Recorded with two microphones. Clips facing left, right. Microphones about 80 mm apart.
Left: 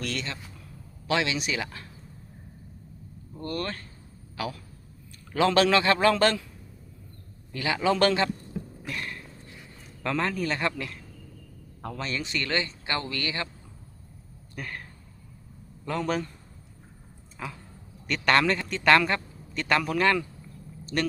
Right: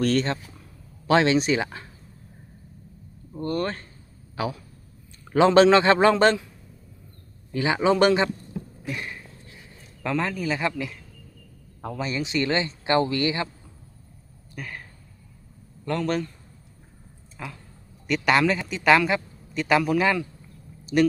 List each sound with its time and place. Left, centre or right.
0.0 s speech: right
3.3 s a man's voice: right
7.5 s speech: right
8.9 s a sound: centre
10.0 s a man's voice: centre
14.5 s a man's voice: centre
17.3 s a man's voice: centre